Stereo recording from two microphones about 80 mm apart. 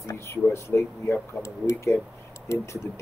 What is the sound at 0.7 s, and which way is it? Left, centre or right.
Speech, centre.